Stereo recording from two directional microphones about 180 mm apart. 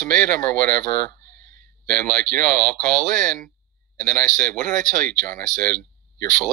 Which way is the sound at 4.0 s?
50° right (ahead or behind).